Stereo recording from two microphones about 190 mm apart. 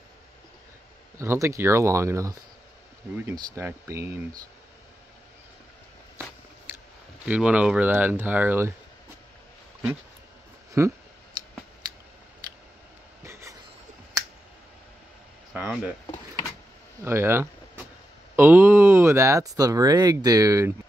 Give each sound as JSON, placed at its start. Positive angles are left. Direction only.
{"t": 1.1, "sound": "speech", "side_deg": -15}
{"t": 7.2, "sound": "speech", "side_deg": -5}
{"t": 10.8, "sound": "speech", "side_deg": -15}
{"t": 13.2, "sound": "a sound", "side_deg": -15}
{"t": 15.5, "sound": "speech", "side_deg": -5}
{"t": 17.0, "sound": "speech", "side_deg": -15}